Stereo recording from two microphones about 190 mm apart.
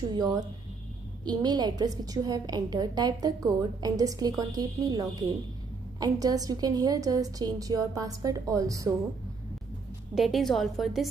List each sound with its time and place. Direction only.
0.1 s a woman's voice: 20° right (ahead or behind)
10.1 s a woman's voice: centre (ahead or behind)